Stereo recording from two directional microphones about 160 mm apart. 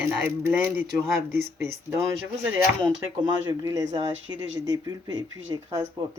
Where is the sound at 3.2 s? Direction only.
25° right (ahead or behind).